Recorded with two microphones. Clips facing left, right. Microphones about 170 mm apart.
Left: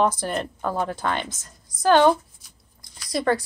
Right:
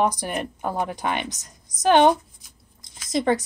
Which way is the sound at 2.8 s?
20° right (ahead or behind).